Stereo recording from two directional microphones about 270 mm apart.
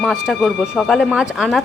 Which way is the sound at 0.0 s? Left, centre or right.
Centre.